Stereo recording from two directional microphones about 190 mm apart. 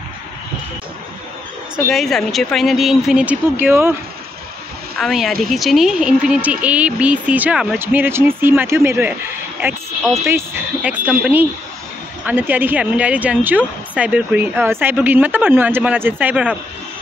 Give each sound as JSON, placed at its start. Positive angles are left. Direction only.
{"t": 1.9, "sound": "speech", "side_deg": 0}
{"t": 4.9, "sound": "a woman's voice", "side_deg": 0}
{"t": 10.2, "sound": "a woman's voice", "side_deg": -10}